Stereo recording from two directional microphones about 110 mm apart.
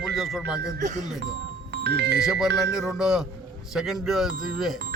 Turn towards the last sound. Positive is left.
turn(degrees=0)  # may be behind; listen again after turning